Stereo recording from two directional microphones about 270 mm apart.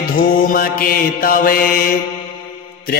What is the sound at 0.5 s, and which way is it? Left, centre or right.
Mantra, left.